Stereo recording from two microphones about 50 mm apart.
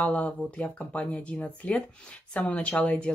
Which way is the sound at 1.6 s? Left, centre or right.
Left.